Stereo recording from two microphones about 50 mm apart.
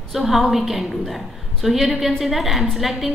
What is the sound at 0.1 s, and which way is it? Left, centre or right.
A woman's voice, centre.